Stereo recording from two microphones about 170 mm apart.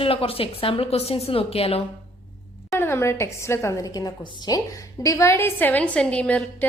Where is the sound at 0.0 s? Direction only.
35° left (ahead or behind).